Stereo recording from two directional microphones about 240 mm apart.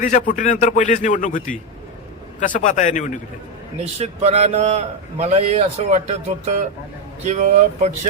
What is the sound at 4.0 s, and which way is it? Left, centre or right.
A man's voice, right.